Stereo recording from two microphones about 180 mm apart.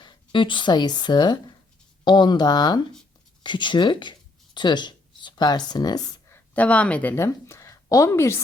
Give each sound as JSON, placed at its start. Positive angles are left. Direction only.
{"t": 0.0, "sound": "speech", "side_deg": 25}